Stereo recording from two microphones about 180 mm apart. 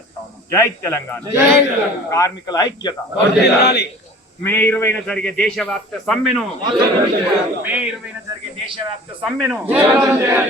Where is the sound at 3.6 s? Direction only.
65° left (ahead or behind).